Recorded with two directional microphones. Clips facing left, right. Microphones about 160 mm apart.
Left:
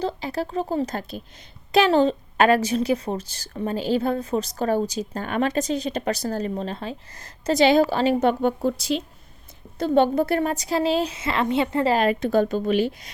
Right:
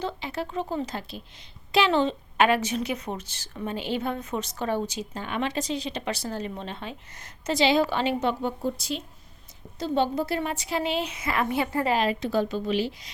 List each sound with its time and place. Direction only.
0.0 s a woman's voice: 35° left (ahead or behind)
7.6 s a woman's voice: 45° left (ahead or behind)
8.3 s speech: 65° left (ahead or behind); by 9.0 s 90° left
9.7 s a woman's voice: 55° left (ahead or behind); by 11.9 s 25° left (ahead or behind)
11.9 s a woman's voice: 50° left (ahead or behind)